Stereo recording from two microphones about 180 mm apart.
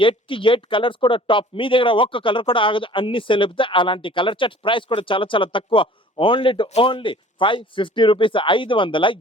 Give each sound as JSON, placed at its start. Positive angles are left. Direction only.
{"t": 0.0, "sound": "speech", "side_deg": 30}